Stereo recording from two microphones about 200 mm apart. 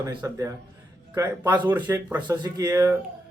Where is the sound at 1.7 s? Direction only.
10° right (ahead or behind).